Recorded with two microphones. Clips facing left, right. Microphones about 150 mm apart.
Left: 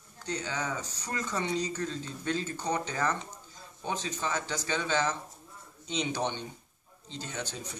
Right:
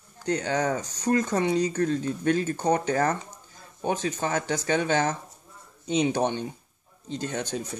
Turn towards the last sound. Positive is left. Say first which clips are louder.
# right 9 dB
turn(degrees=-55)  # may be behind; listen again after turning